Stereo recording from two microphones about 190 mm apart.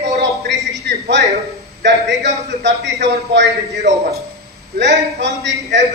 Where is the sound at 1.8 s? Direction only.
65° right (ahead or behind).